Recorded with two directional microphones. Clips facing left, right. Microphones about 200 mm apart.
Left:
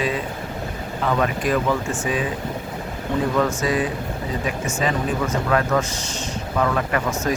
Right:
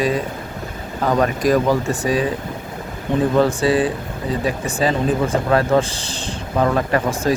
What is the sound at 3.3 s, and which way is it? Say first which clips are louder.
Speech: right 6 dB; 30° right (ahead or behind).